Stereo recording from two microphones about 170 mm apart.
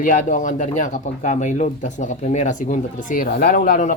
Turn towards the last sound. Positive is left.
turn(degrees=50)  # may be behind; listen again after turning